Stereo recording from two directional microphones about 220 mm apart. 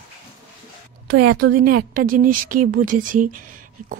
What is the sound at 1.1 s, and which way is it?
A woman's voice, 45° right (ahead or behind).